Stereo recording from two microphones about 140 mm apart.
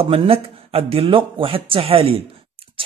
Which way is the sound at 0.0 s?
40° right (ahead or behind).